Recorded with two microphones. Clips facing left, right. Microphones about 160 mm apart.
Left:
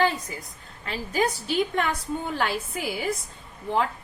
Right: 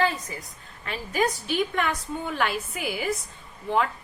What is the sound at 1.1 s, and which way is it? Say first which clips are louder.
Speech: even; 30° left (ahead or behind).